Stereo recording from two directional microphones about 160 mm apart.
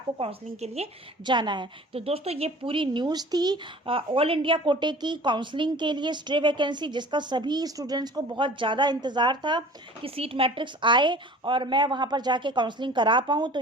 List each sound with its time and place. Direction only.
0.2 s speech: 40° right (ahead or behind)
1.3 s a woman's voice: 30° right (ahead or behind)